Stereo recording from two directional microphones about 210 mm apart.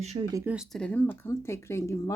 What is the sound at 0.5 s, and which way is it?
Speech, 5° left (ahead or behind).